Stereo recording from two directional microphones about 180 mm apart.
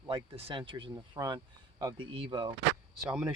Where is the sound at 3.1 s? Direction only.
15° right (ahead or behind).